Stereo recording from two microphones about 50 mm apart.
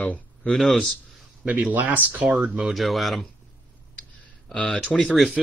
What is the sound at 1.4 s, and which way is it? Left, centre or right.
Speech, right.